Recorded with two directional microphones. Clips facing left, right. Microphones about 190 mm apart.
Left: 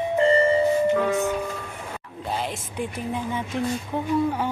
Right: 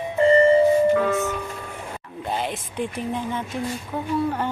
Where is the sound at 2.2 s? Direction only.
Centre (ahead or behind).